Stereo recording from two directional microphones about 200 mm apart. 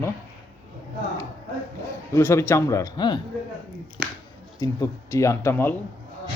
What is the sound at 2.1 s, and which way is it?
Speech, 15° left (ahead or behind).